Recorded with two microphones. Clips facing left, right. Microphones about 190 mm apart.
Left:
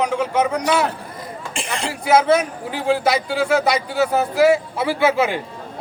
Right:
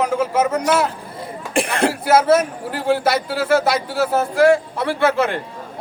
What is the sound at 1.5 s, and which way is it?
Speech, 60° right (ahead or behind).